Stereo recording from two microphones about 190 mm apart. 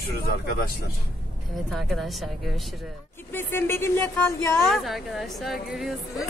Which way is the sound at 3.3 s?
10° left (ahead or behind).